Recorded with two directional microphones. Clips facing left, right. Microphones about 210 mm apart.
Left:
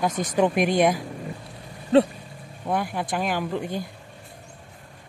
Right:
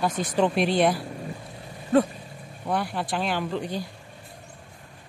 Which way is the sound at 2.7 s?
10° left (ahead or behind).